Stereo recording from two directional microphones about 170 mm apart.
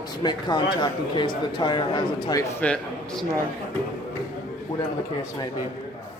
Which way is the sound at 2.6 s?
5° left (ahead or behind).